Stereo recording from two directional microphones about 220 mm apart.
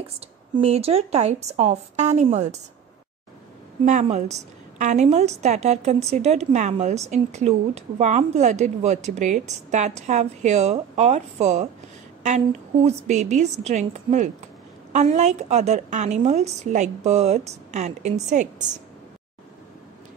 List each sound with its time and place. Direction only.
0.6 s a woman's voice: 25° right (ahead or behind)
3.8 s a woman's voice: 30° right (ahead or behind)